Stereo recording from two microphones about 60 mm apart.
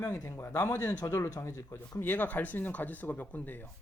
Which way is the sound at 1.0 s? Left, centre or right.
Left.